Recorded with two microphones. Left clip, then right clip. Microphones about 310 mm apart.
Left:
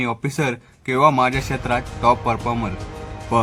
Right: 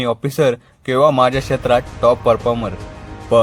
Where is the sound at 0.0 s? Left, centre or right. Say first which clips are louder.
Right 7 dB; centre.